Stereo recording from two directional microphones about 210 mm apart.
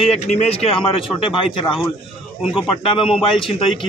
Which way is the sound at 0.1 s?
30° left (ahead or behind).